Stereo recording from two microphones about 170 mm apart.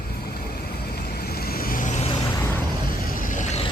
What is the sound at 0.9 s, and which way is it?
Vehicle, 65° left (ahead or behind).